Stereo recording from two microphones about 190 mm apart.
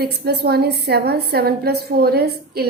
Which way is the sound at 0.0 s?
60° right (ahead or behind).